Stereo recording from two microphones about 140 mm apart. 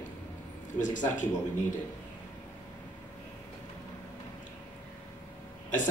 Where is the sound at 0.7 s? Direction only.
65° left (ahead or behind).